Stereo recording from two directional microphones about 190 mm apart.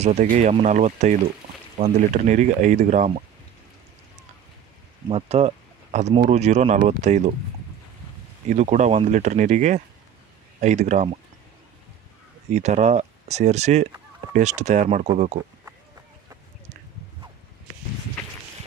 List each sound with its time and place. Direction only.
0.0 s speech: 40° right (ahead or behind)
5.1 s speech: 35° right (ahead or behind)
8.5 s speech: 40° right (ahead or behind)
12.4 s speech: 35° right (ahead or behind)